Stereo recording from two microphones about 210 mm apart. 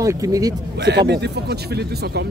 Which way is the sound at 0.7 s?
50° right (ahead or behind).